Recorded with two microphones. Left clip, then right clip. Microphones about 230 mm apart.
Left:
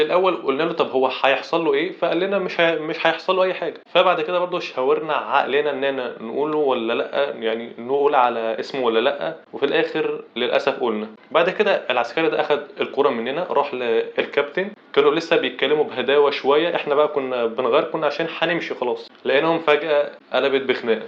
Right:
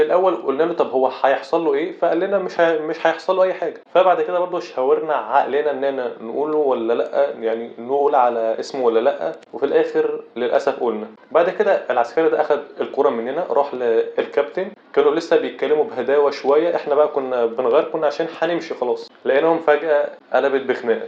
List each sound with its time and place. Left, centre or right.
0.0 s a man's voice: left
3.4 s speech: left
4.1 s a man's voice: left
6.4 s speech: left
13.8 s a man's voice: left
15.7 s speech: left
16.8 s a man's voice: left
18.2 s speech: left
18.5 s a man's voice: left
19.3 s speech: left
19.6 s a man's voice: left
20.4 s speech: left